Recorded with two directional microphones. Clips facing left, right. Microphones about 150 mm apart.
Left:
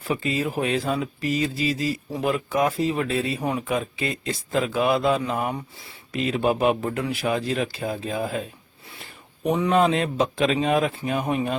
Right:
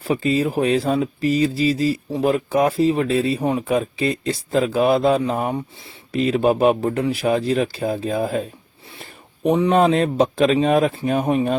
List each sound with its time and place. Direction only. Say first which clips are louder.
0.0 s speech: right 6 dB; 35° right (ahead or behind)
9.5 s speech: right 4 dB; 35° right (ahead or behind)